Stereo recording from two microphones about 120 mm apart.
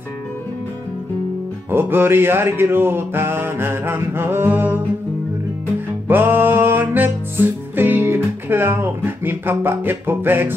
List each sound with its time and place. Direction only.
1.7 s music: 20° right (ahead or behind)
6.0 s music: 15° right (ahead or behind)